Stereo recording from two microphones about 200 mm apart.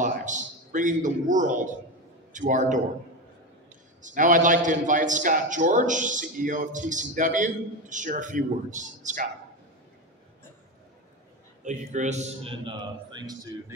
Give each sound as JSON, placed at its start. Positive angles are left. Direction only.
{"t": 0.0, "sound": "a man's voice", "side_deg": -40}
{"t": 4.0, "sound": "a man's voice", "side_deg": -40}
{"t": 11.6, "sound": "a man's voice", "side_deg": -35}